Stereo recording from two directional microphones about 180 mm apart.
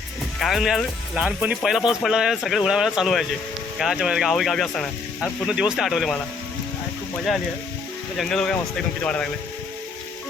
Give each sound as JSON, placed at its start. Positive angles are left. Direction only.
{"t": 0.3, "sound": "speech", "side_deg": 0}
{"t": 8.2, "sound": "speech", "side_deg": 5}